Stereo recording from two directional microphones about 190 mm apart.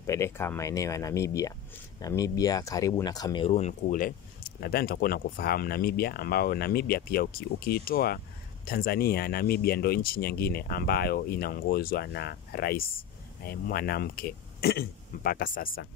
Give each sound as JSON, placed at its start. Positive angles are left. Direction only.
{"t": 0.0, "sound": "speech", "side_deg": 15}
{"t": 3.4, "sound": "speech", "side_deg": 35}